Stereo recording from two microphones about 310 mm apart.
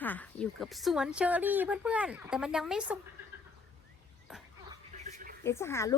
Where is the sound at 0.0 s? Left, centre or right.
Centre.